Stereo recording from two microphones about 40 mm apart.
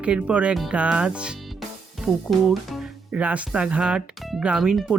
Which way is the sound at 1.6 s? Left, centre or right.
Centre.